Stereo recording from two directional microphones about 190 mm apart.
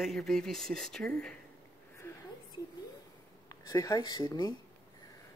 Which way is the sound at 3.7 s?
20° left (ahead or behind).